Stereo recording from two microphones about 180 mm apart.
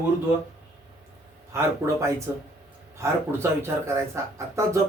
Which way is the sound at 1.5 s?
15° right (ahead or behind).